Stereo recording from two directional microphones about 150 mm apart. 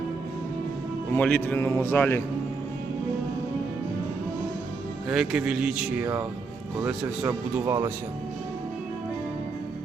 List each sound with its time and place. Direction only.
1.1 s a man's voice: 10° left (ahead or behind)
5.0 s speech: 5° right (ahead or behind); by 7.9 s 20° right (ahead or behind)